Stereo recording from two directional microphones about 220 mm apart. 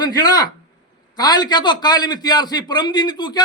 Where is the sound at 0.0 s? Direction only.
20° left (ahead or behind).